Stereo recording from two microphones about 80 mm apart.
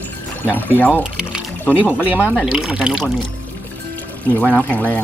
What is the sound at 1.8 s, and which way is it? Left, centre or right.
Speech, centre.